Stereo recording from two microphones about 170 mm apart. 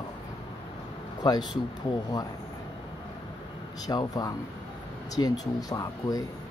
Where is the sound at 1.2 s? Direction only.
25° left (ahead or behind).